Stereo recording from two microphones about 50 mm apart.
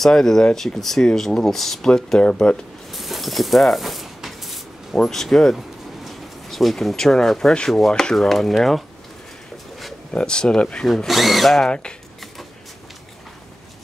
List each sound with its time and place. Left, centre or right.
0.0 s speech: centre
0.7 s speech: centre
2.9 s a sound: centre
5.0 s speech: centre
5.6 s a sound: centre
7.5 s speech: centre
10.1 s speech: centre
11.1 s speech: centre